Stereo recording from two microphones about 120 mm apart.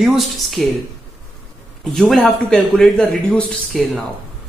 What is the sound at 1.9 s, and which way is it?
Speech, 5° left (ahead or behind).